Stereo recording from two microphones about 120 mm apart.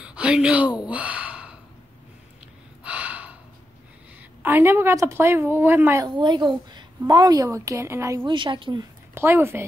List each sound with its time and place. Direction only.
0.0 s gasp: 10° right (ahead or behind)
2.8 s gasp: 10° right (ahead or behind)
4.4 s a woman's voice: 15° right (ahead or behind)
6.0 s a woman's voice: 40° right (ahead or behind); by 8.3 s 25° right (ahead or behind)
8.3 s speech: 45° right (ahead or behind)
9.1 s speech: 20° right (ahead or behind)